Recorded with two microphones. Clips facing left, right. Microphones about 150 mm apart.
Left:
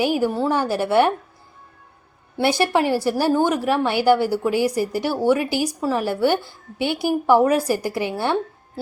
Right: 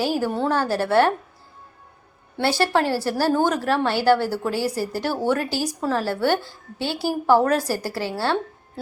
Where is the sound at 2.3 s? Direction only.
15° left (ahead or behind).